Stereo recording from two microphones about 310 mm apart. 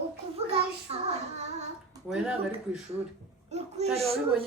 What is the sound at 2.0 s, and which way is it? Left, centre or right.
Speech, centre.